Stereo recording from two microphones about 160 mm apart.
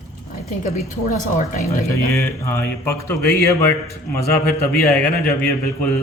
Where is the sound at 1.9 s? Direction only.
15° left (ahead or behind).